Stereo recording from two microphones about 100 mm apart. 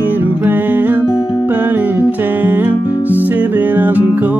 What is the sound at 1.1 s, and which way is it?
Music, 45° left (ahead or behind).